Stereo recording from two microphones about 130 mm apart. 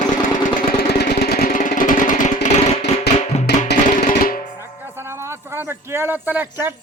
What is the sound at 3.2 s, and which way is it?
Music, 55° left (ahead or behind).